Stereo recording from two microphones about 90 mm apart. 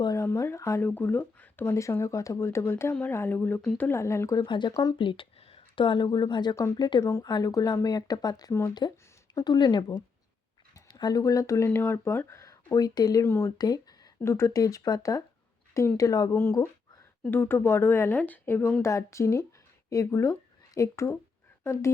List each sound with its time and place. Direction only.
0.2 s a sound: 25° left (ahead or behind)
0.8 s speech: 20° left (ahead or behind)
1.7 s speech: 30° left (ahead or behind)
4.4 s speech: 60° left (ahead or behind)
4.7 s speech: 45° left (ahead or behind)
4.9 s speech: 70° left (ahead or behind)
6.1 s speech: 55° left (ahead or behind)
7.0 s speech: 30° left (ahead or behind)
7.3 s speech: 45° left (ahead or behind); by 12.4 s 30° left (ahead or behind)
12.7 s speech: 45° left (ahead or behind)
13.2 s speech: 25° left (ahead or behind)
13.6 s speech: 45° left (ahead or behind)
14.3 s speech: 30° left (ahead or behind)
16.3 s speech: 25° left (ahead or behind)